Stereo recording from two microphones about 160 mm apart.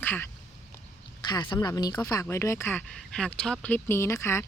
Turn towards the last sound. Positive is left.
turn(degrees=15)  # may be behind; listen again after turning